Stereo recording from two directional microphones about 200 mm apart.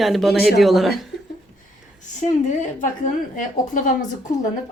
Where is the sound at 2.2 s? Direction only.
40° left (ahead or behind).